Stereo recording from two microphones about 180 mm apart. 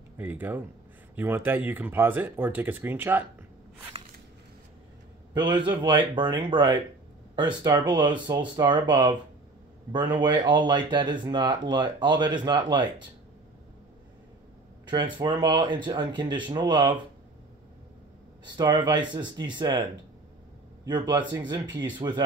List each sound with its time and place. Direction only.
0.2 s speech: 10° right (ahead or behind)
5.3 s a man's voice: 25° right (ahead or behind)
14.9 s speech: 25° right (ahead or behind)
18.4 s speech: 25° right (ahead or behind)